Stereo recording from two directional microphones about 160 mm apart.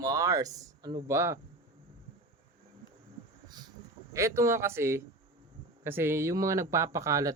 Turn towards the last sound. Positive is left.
turn(degrees=-20)  # may be behind; listen again after turning